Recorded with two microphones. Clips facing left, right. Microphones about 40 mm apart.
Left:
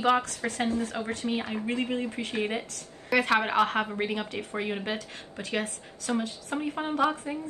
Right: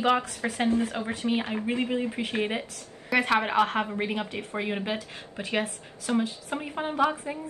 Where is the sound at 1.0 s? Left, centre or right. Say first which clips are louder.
Right 1 dB; right.